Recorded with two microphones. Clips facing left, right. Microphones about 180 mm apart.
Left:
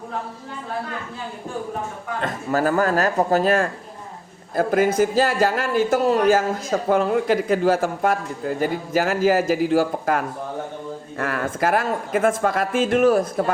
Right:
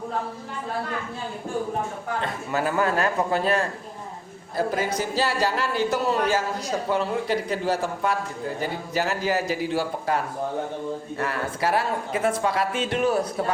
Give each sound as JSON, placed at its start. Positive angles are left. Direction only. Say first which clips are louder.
{"t": 2.2, "sound": "a man's voice", "louder": "left 7 dB", "side_deg": 40}